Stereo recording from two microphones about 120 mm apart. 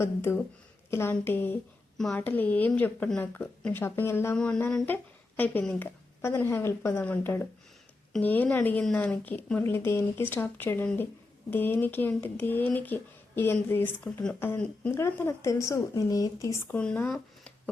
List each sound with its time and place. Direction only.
0.0 s a woman's voice: 20° left (ahead or behind)
4.4 s speech: 5° left (ahead or behind); by 16.7 s 25° left (ahead or behind)
16.7 s speech: 10° left (ahead or behind)